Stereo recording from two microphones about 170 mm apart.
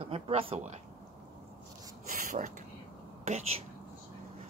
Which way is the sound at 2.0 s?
55° right (ahead or behind).